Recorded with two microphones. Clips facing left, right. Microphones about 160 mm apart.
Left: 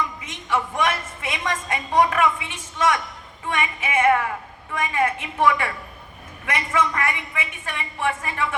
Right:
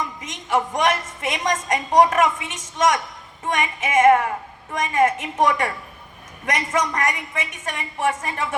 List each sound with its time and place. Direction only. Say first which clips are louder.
0.2 s a woman's voice: right 3 dB; 45° right (ahead or behind)
6.7 s a woman's voice: left 1 dB; 40° right (ahead or behind)